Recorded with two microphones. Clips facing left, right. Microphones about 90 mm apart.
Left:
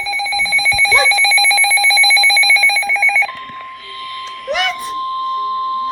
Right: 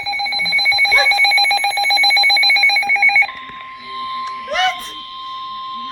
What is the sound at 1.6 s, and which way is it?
Telephone bell ringing, 50° right (ahead or behind).